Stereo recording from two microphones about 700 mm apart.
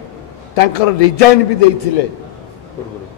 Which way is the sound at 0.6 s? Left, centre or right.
Left.